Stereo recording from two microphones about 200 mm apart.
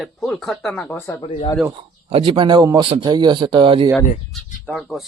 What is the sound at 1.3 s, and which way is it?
Speech, 25° left (ahead or behind).